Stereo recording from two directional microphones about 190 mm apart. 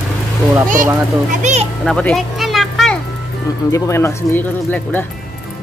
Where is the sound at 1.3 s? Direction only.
40° right (ahead or behind).